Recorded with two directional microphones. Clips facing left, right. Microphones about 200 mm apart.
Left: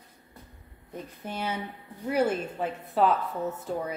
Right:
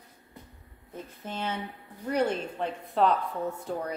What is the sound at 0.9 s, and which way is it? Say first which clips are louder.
A woman's voice: left 1 dB; 10° left (ahead or behind).